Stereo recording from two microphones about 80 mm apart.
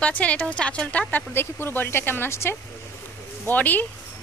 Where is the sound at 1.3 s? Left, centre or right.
Left.